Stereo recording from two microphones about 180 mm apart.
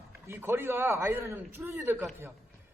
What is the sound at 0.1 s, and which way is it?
A man's voice, 10° right (ahead or behind).